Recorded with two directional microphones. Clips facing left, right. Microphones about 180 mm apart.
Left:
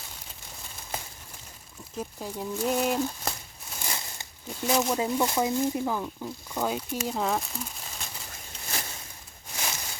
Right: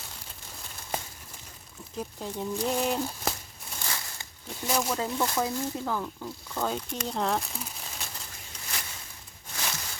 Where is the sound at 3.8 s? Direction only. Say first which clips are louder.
Left 1 dB; 20° left (ahead or behind).